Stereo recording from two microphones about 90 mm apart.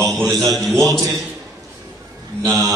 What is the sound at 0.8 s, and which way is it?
Speech, 35° right (ahead or behind).